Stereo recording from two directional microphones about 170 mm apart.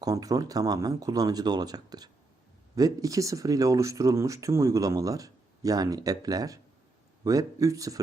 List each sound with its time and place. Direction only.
0.0 s speech: 20° right (ahead or behind)